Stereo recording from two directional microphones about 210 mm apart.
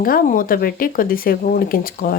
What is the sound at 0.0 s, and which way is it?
Speech, 40° left (ahead or behind).